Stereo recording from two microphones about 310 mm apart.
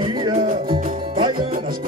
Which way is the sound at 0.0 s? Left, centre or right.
Centre.